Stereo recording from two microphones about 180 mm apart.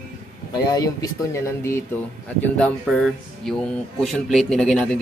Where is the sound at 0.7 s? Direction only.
20° left (ahead or behind); by 4.8 s centre (ahead or behind).